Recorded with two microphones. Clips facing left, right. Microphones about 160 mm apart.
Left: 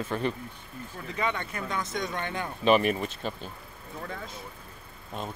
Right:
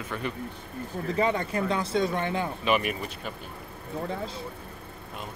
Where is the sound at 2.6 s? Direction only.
35° left (ahead or behind).